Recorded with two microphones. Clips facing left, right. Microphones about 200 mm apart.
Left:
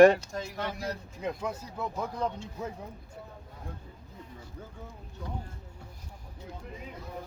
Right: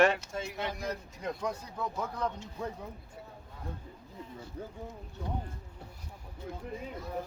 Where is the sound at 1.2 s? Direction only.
5° left (ahead or behind).